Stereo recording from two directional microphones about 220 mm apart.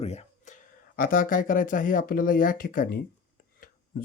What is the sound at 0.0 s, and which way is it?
Speech, 30° left (ahead or behind).